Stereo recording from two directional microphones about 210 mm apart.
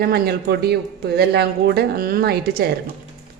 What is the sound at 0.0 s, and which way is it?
A man's voice, 50° right (ahead or behind).